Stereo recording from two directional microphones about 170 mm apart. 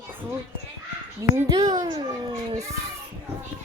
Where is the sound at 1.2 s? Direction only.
20° right (ahead or behind).